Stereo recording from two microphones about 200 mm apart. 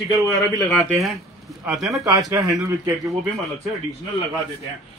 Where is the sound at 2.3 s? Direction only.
15° right (ahead or behind).